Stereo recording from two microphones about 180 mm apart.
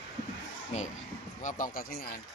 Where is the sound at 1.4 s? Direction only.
50° left (ahead or behind).